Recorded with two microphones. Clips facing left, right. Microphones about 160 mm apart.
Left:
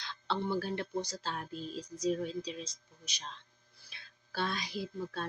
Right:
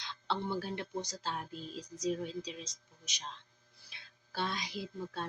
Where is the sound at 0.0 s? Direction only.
15° right (ahead or behind).